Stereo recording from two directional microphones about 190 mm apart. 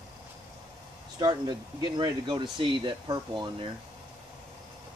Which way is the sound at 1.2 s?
20° right (ahead or behind).